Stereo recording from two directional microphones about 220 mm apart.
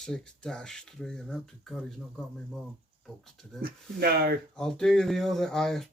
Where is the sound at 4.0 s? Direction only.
45° right (ahead or behind).